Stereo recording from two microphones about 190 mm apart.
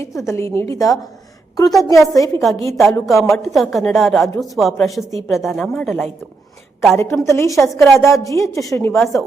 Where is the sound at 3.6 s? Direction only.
Centre (ahead or behind).